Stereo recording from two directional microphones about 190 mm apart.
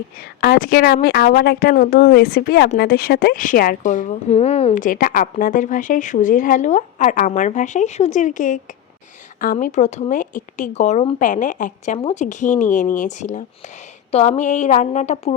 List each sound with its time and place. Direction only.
0.2 s a woman's voice: 55° left (ahead or behind); by 15.4 s 35° left (ahead or behind)